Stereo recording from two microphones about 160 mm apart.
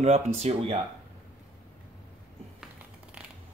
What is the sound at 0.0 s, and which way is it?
Speech, 40° right (ahead or behind).